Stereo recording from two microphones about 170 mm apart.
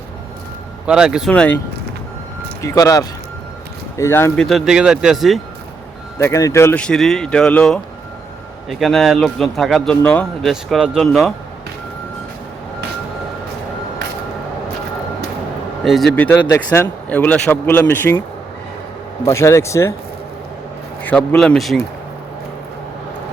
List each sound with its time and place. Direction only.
0.9 s speech: 5° right (ahead or behind)
1.3 s speech: 10° left (ahead or behind)
2.6 s speech: 20° left (ahead or behind)
4.4 s speech: centre (ahead or behind)
6.1 s speech: 15° left (ahead or behind)
8.8 s speech: centre (ahead or behind)
10.5 s speech: 5° right (ahead or behind)
15.8 s speech: centre (ahead or behind)
19.2 s speech: 15° left (ahead or behind)
21.0 s speech: 10° left (ahead or behind)